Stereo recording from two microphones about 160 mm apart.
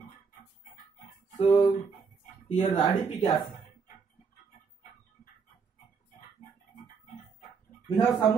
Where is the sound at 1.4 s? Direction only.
40° left (ahead or behind).